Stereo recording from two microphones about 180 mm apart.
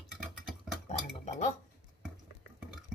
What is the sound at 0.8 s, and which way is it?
Cutlery, 40° left (ahead or behind).